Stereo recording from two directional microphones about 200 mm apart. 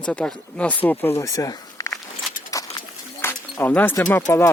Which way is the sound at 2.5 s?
15° left (ahead or behind).